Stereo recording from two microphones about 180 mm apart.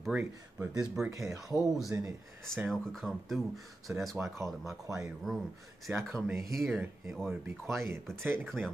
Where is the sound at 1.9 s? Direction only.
15° right (ahead or behind).